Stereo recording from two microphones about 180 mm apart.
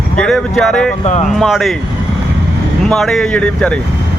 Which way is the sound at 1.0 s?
40° left (ahead or behind).